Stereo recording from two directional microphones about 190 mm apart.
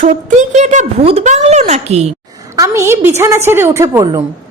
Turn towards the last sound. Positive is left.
turn(degrees=-20)  # may be behind; listen again after turning